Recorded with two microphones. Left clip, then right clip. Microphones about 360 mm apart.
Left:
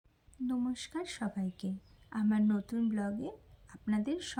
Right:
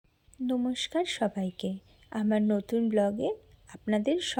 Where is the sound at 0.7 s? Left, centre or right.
Centre.